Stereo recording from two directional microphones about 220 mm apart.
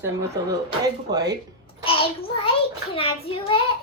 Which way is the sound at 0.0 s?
15° right (ahead or behind).